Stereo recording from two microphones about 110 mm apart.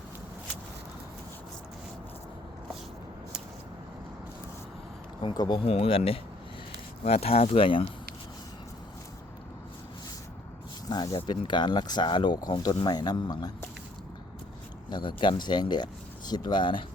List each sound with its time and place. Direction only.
5.3 s speech: 40° left (ahead or behind)
5.6 s speech: 65° left (ahead or behind)
10.8 s speech: 40° left (ahead or behind)
14.8 s speech: 45° left (ahead or behind)